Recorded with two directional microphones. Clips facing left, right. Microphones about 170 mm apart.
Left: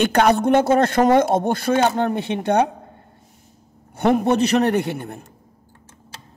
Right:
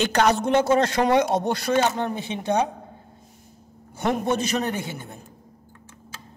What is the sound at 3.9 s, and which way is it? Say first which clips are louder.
A man's voice: left 6 dB; 60° left (ahead or behind).